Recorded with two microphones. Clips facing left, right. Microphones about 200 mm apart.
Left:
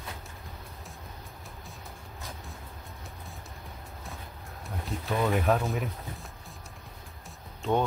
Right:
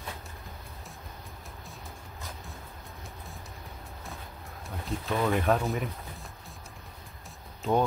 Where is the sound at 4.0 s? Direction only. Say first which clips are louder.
Right 1 dB; centre (ahead or behind).